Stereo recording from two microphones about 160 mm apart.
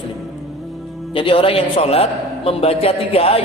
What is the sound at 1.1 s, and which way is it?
A man's voice, 30° left (ahead or behind).